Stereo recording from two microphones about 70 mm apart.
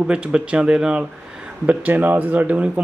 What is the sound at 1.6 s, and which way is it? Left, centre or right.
Speech, right.